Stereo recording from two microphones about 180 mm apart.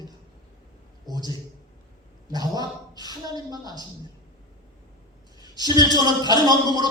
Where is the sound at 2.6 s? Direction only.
20° left (ahead or behind).